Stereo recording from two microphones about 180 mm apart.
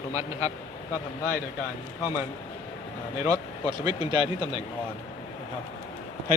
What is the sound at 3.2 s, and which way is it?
Speech, 20° right (ahead or behind).